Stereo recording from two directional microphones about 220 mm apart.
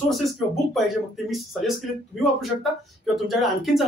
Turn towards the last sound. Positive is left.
turn(degrees=0)  # may be behind; listen again after turning